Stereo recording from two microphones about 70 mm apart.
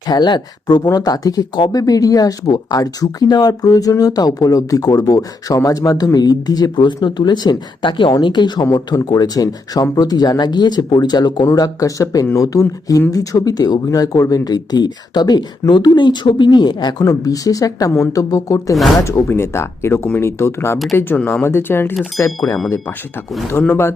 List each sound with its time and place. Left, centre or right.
0.1 s speech: left
0.9 s speech: left
9.0 s speech: left
11.5 s speech: left
17.0 s speech: left
19.0 s speech: left
23.6 s speech: left